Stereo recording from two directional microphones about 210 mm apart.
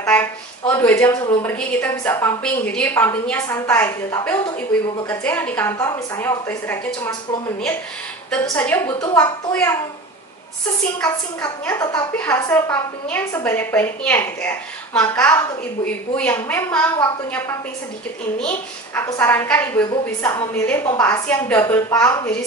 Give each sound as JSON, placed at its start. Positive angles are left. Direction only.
{"t": 0.0, "sound": "a woman's voice", "side_deg": 10}
{"t": 8.3, "sound": "a woman's voice", "side_deg": 10}
{"t": 11.1, "sound": "a woman's voice", "side_deg": 10}
{"t": 19.8, "sound": "a woman's voice", "side_deg": 20}
{"t": 20.3, "sound": "a woman's voice", "side_deg": 10}